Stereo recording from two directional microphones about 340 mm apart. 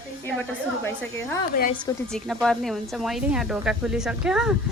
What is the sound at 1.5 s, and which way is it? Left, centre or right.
Speech, left.